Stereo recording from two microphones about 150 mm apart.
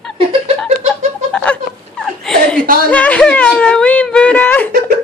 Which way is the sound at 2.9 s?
10° left (ahead or behind).